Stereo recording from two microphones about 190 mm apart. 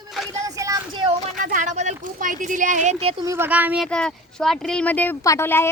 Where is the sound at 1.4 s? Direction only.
45° right (ahead or behind).